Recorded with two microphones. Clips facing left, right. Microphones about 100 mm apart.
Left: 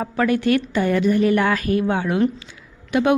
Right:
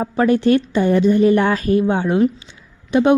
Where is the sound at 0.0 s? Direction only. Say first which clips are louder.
Right 4 dB; 25° right (ahead or behind).